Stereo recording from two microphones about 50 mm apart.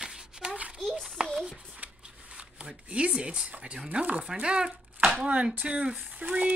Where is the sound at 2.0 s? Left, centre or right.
Right.